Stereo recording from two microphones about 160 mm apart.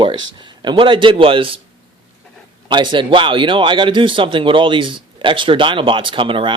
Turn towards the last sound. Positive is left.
turn(degrees=-30)  # may be behind; listen again after turning